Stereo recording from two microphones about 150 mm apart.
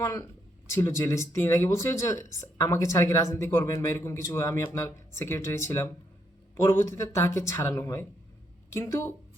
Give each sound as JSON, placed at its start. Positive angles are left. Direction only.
{"t": 0.0, "sound": "speech", "side_deg": 20}